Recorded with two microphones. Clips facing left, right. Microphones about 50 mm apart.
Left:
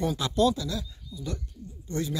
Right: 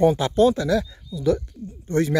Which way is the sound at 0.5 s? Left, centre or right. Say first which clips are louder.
Right 12 dB; right.